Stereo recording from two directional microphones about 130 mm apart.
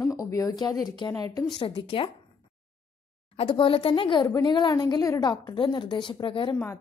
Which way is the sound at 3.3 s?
40° left (ahead or behind).